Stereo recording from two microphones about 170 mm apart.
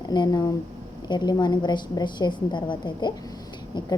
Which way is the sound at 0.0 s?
25° left (ahead or behind).